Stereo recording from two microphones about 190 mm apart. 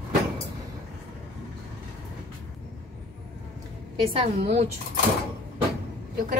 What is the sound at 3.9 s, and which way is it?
Speech, 30° right (ahead or behind).